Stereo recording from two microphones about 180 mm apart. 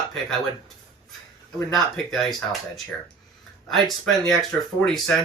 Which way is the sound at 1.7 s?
Centre (ahead or behind).